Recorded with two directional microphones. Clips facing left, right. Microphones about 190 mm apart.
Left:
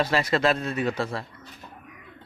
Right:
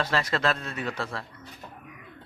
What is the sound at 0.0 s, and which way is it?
Speech, 10° left (ahead or behind).